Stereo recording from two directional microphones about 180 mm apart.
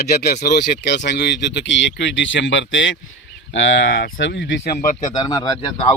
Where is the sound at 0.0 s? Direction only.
65° left (ahead or behind).